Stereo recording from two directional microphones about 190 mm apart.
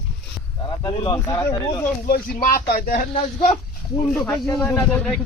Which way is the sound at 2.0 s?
50° left (ahead or behind).